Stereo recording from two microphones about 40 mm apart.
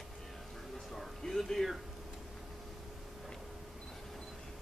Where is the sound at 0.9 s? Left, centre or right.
Centre.